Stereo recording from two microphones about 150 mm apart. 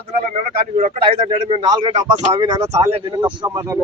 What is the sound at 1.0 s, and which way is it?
Speech, 35° right (ahead or behind).